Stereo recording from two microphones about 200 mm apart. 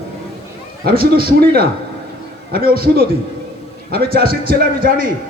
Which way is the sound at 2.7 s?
45° right (ahead or behind).